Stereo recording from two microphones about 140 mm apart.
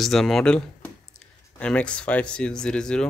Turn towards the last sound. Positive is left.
turn(degrees=5)  # may be behind; listen again after turning